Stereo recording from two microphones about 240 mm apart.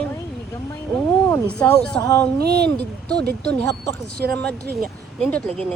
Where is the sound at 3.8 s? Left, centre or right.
Right.